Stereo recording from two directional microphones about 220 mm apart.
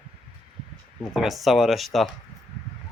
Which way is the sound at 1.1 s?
Centre (ahead or behind).